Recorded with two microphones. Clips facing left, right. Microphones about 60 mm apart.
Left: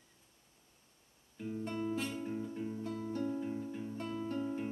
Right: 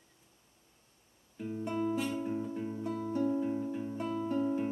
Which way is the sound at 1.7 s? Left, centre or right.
Centre.